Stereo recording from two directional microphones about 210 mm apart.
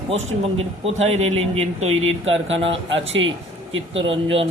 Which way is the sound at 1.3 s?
30° right (ahead or behind).